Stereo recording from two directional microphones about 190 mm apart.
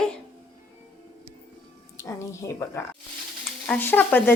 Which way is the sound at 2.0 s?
15° left (ahead or behind).